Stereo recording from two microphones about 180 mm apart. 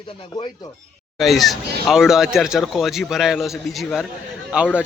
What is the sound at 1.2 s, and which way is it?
A man's voice, centre (ahead or behind).